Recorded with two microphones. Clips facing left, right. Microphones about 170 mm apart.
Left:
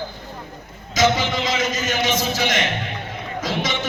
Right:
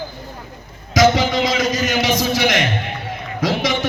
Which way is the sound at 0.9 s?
75° right (ahead or behind).